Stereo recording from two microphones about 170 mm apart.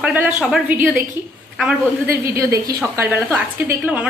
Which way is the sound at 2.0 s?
15° right (ahead or behind).